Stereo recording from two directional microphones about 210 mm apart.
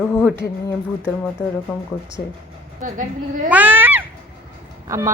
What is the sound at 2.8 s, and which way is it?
Speech, 40° right (ahead or behind).